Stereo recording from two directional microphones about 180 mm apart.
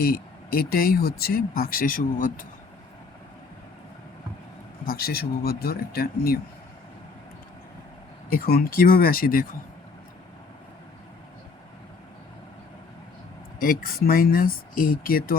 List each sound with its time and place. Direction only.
0.0 s speech: 55° left (ahead or behind)
4.9 s speech: 60° left (ahead or behind)
8.3 s speech: 55° left (ahead or behind)
13.6 s speech: 50° left (ahead or behind)